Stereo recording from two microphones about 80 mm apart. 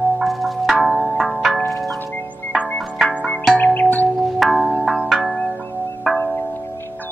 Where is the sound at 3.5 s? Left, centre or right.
Left.